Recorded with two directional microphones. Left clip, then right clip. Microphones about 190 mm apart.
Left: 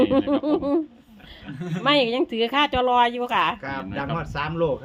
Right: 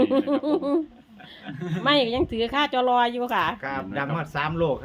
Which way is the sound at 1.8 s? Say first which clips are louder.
Left 1 dB; 10° left (ahead or behind).